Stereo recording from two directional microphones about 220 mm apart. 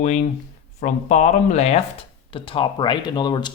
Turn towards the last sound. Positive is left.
turn(degrees=20)  # may be behind; listen again after turning